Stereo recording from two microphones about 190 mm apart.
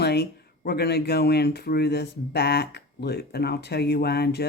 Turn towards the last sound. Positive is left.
turn(degrees=55)  # may be behind; listen again after turning